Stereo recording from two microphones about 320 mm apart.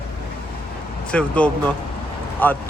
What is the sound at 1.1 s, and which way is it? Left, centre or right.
Speech, centre.